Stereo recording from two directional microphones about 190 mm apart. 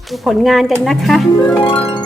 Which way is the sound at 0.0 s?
Centre (ahead or behind).